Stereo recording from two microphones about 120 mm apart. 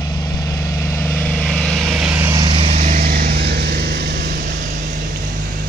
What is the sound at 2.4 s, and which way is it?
Vehicle, 50° right (ahead or behind).